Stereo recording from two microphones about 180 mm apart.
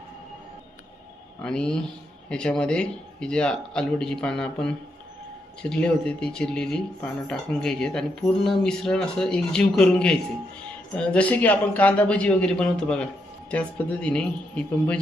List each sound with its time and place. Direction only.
1.4 s a man's voice: 5° left (ahead or behind)